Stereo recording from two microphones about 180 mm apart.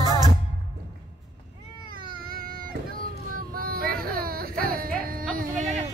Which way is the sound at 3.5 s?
55° right (ahead or behind).